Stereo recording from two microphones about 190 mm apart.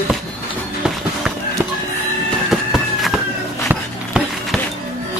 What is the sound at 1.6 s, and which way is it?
Music, 10° right (ahead or behind).